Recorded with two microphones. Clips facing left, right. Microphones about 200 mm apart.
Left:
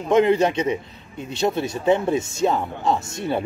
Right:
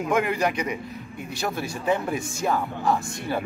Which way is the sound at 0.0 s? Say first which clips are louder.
Left 6 dB; 25° left (ahead or behind).